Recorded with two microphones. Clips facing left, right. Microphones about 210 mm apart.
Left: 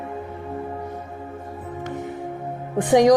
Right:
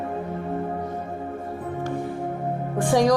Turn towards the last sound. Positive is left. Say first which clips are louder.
# left 4 dB
turn(degrees=20)  # may be behind; listen again after turning